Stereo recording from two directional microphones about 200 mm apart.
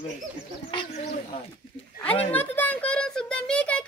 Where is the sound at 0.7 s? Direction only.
25° left (ahead or behind).